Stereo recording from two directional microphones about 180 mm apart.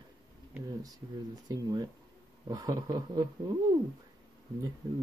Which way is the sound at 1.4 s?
20° right (ahead or behind).